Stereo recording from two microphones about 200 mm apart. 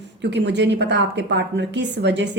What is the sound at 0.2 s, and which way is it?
A woman's voice, 60° right (ahead or behind).